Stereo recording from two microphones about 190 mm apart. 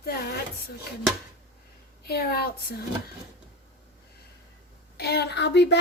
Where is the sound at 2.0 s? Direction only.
55° left (ahead or behind).